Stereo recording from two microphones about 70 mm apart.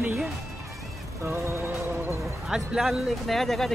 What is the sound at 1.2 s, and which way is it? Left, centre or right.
Music, right.